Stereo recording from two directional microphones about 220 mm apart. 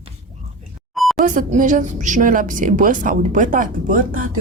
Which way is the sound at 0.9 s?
Centre (ahead or behind).